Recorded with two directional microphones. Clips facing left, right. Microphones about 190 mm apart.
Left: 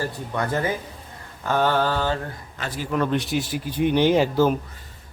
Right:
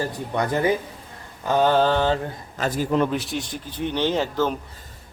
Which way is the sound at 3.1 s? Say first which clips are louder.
Left 3 dB; centre (ahead or behind).